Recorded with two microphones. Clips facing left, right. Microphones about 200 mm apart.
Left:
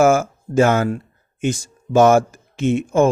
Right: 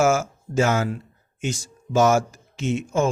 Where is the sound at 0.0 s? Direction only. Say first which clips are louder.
Left 5 dB; 55° left (ahead or behind).